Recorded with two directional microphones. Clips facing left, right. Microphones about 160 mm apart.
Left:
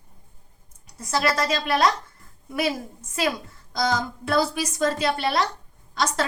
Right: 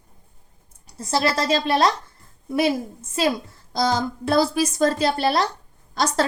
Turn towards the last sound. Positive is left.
turn(degrees=-35)  # may be behind; listen again after turning